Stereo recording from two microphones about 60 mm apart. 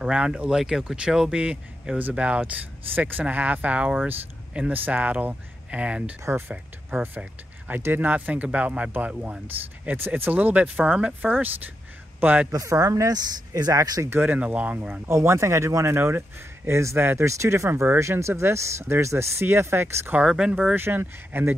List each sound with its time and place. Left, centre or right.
0.0 s speech: centre
7.2 s a man's voice: right
12.6 s speech: right
14.1 s speech: right
14.4 s speech: right
15.0 s speech: right
17.3 s speech: right
20.2 s speech: centre
20.7 s speech: right